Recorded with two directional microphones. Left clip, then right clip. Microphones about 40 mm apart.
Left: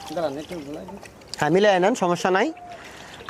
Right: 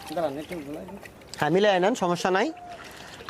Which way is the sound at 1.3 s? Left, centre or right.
Left.